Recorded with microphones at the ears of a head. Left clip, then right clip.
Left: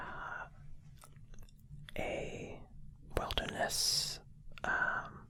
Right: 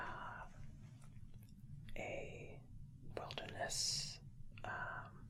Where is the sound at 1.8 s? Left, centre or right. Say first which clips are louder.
Left 8 dB; left.